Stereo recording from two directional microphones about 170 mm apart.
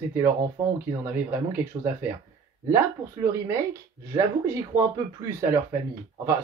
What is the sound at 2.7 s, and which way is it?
Speech, 20° right (ahead or behind).